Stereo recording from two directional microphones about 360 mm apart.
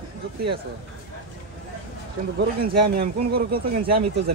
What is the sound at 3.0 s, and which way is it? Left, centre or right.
Speech, right.